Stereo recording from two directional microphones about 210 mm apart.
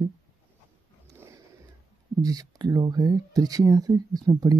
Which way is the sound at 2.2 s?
20° right (ahead or behind).